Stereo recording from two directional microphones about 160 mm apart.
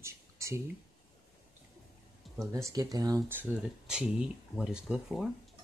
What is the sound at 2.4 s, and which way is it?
Speech, 20° right (ahead or behind).